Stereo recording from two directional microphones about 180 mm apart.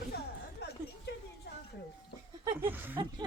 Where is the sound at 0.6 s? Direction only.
65° left (ahead or behind).